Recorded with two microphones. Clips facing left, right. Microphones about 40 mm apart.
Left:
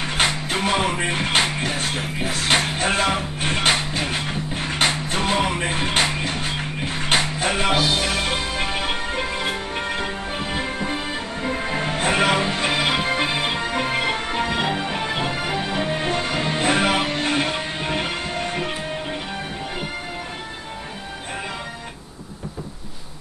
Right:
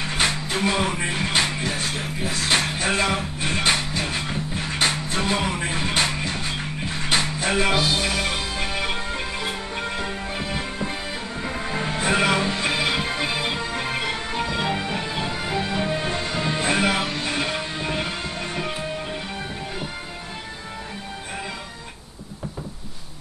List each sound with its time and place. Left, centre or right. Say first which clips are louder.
0.2 s music: left 1 dB; left